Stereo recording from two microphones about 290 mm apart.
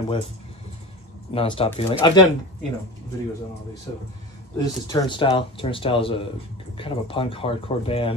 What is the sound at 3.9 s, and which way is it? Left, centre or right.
Speech, centre.